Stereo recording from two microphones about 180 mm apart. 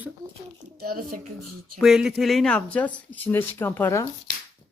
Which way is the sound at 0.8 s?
55° right (ahead or behind).